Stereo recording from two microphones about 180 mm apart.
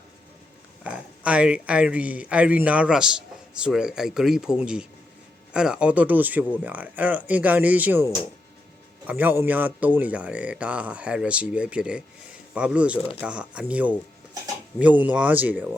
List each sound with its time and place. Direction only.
0.9 s speech: 5° right (ahead or behind)
13.0 s speech: 30° left (ahead or behind)
13.2 s speech: 5° right (ahead or behind)